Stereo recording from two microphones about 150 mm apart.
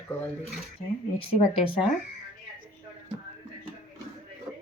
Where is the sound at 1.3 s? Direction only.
35° left (ahead or behind).